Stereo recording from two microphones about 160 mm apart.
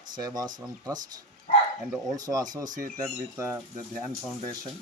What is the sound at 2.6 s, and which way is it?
Speech, 55° right (ahead or behind).